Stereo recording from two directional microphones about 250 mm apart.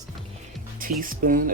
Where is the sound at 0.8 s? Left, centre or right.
Right.